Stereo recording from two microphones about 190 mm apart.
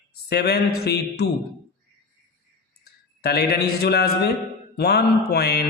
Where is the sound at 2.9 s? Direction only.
55° left (ahead or behind).